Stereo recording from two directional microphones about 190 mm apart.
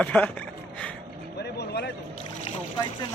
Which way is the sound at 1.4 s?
60° left (ahead or behind).